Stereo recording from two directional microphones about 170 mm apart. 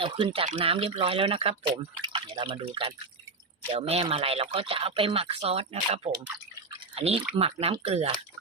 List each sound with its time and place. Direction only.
0.0 s speech: 30° right (ahead or behind)